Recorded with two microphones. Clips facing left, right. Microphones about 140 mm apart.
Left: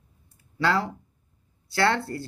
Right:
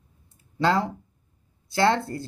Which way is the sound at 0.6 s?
20° right (ahead or behind).